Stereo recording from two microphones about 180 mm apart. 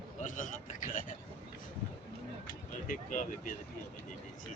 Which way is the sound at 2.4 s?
50° left (ahead or behind).